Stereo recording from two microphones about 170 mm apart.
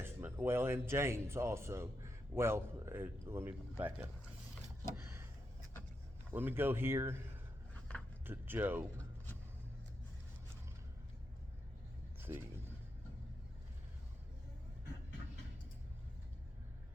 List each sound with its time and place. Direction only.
0.0 s speech: 10° right (ahead or behind)
5.0 s a sound: 15° right (ahead or behind)
6.3 s speech: 10° right (ahead or behind)
7.7 s a sound: 5° left (ahead or behind)
8.2 s speech: 10° right (ahead or behind)
12.3 s speech: 15° right (ahead or behind)